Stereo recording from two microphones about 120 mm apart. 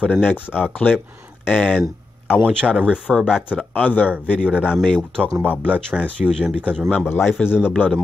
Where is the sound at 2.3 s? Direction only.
10° right (ahead or behind).